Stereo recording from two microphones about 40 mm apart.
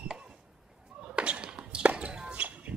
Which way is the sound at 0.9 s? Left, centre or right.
Right.